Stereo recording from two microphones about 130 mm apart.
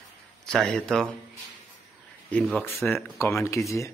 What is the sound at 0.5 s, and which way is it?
Speech, 5° left (ahead or behind).